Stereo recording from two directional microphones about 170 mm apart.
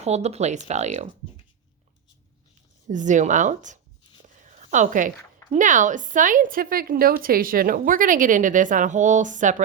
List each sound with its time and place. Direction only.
0.0 s speech: 40° right (ahead or behind)
2.8 s speech: 45° right (ahead or behind)